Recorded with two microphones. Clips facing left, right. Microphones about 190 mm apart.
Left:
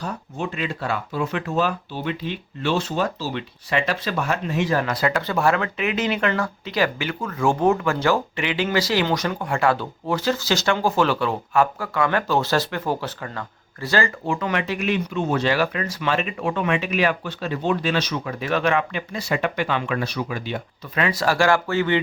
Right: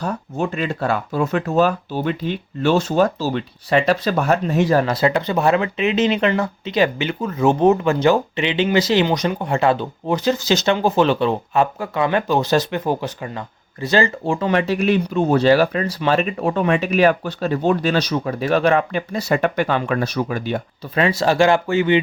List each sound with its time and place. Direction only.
0.0 s speech: 45° right (ahead or behind)
20.9 s speech: 30° right (ahead or behind)